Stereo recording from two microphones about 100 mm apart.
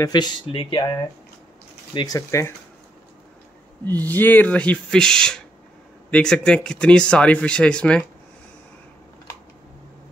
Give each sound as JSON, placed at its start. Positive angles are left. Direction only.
{"t": 0.1, "sound": "speech", "side_deg": 45}
{"t": 0.6, "sound": "speech", "side_deg": 60}
{"t": 2.0, "sound": "speech", "side_deg": 30}
{"t": 3.8, "sound": "speech", "side_deg": 20}